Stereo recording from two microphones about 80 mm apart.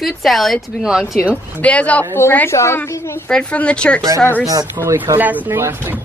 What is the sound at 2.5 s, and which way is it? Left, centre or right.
Speech, left.